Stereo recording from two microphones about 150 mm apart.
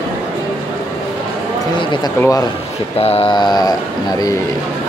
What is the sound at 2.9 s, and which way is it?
Speech, 40° left (ahead or behind).